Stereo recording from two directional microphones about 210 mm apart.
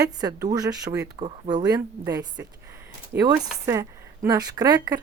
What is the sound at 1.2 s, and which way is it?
Speech, 25° right (ahead or behind).